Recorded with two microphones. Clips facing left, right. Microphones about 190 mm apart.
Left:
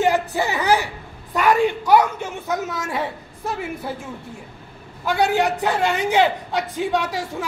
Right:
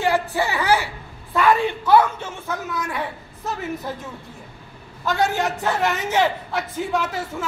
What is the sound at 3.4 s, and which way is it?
A man's voice, 10° left (ahead or behind).